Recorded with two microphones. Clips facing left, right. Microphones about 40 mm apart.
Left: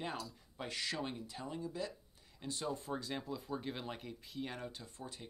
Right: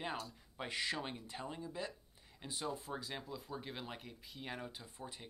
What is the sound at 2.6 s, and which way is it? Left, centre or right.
Speech, centre.